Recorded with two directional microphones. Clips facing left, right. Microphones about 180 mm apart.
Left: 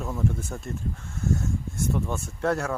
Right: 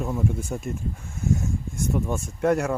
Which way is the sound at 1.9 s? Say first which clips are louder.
Right 5 dB; 10° right (ahead or behind).